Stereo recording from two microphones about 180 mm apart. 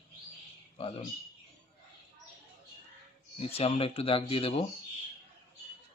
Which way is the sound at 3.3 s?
30° left (ahead or behind).